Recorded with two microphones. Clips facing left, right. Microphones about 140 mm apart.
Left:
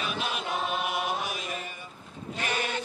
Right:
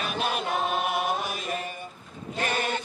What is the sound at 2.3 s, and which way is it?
Sheep, 45° right (ahead or behind).